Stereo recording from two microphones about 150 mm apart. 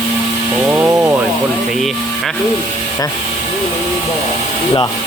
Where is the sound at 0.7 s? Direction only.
10° right (ahead or behind).